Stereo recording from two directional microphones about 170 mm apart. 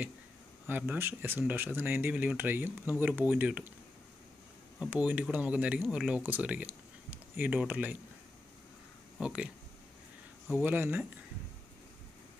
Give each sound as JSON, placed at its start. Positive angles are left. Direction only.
{"t": 0.7, "sound": "speech", "side_deg": -10}
{"t": 4.7, "sound": "speech", "side_deg": -5}
{"t": 9.2, "sound": "speech", "side_deg": -5}
{"t": 10.6, "sound": "speech", "side_deg": -10}